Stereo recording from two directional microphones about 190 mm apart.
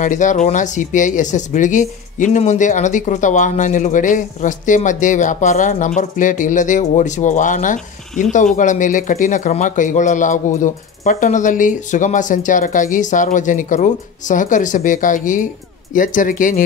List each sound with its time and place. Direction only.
0.0 s speech: 40° left (ahead or behind)